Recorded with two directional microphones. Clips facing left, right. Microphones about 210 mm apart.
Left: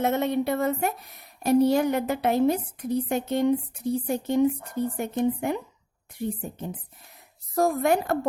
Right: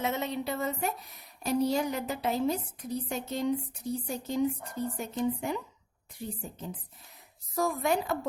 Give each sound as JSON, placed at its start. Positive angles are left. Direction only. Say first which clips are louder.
{"t": 0.0, "sound": "a woman's voice", "louder": "left 8 dB", "side_deg": 55}